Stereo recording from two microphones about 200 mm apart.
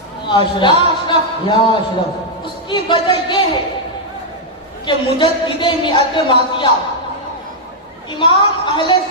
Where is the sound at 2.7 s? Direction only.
25° left (ahead or behind).